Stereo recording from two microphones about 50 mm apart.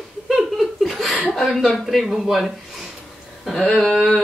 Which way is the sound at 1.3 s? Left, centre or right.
Centre.